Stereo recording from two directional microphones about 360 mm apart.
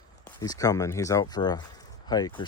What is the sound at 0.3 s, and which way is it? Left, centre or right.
Speech, centre.